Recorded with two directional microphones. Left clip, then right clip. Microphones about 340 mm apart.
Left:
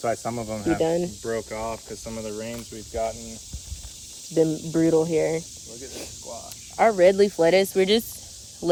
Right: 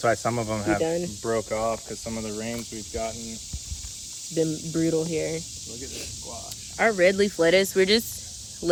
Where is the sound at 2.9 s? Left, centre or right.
Centre.